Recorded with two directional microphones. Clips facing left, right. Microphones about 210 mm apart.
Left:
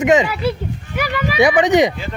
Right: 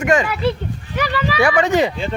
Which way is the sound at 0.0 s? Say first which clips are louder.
Left 2 dB; 20° left (ahead or behind).